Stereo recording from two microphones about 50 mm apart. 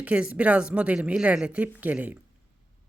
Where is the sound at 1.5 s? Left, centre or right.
Right.